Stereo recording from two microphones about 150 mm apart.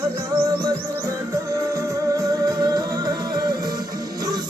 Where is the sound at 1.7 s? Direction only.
20° right (ahead or behind).